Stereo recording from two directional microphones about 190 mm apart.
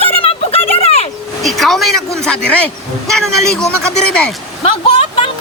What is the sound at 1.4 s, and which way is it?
Speech, centre (ahead or behind).